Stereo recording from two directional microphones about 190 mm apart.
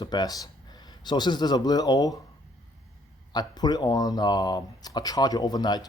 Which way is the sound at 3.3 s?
20° left (ahead or behind).